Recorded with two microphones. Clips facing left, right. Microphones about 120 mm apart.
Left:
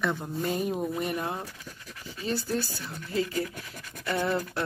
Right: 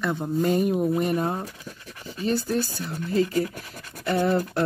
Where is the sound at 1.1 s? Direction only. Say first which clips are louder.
Right 6 dB; 40° right (ahead or behind).